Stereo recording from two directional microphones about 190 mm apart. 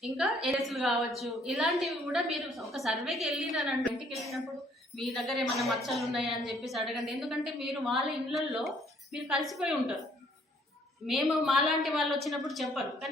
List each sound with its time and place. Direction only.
0.4 s a woman's voice: centre (ahead or behind)
11.0 s a woman's voice: centre (ahead or behind)